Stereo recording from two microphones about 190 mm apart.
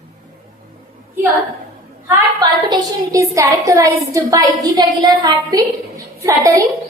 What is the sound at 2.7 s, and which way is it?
A woman's voice, 15° right (ahead or behind).